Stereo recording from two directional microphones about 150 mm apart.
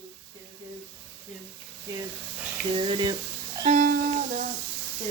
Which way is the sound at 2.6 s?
35° right (ahead or behind).